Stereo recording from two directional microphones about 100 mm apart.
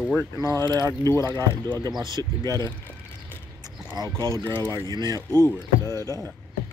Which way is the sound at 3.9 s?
40° right (ahead or behind).